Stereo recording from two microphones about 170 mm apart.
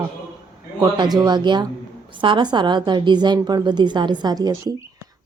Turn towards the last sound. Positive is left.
turn(degrees=-25)  # may be behind; listen again after turning